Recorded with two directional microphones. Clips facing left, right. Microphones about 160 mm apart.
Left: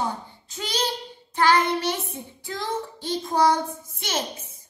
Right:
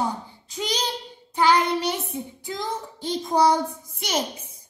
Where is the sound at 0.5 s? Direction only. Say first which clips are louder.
Even; 15° right (ahead or behind).